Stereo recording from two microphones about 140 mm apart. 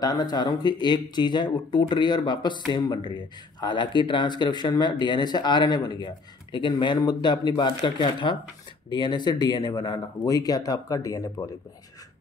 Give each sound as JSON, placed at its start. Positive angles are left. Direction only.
{"t": 0.0, "sound": "speech", "side_deg": 25}